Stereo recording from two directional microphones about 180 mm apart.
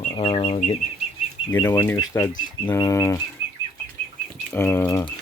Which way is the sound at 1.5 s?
10° left (ahead or behind).